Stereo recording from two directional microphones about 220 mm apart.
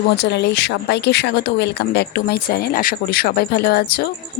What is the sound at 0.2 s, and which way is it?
Speech, 50° left (ahead or behind).